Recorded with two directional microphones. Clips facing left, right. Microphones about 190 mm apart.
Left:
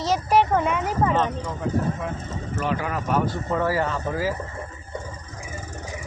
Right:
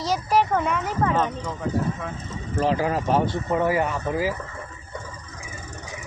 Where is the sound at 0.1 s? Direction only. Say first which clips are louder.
Left 2 dB; 5° left (ahead or behind).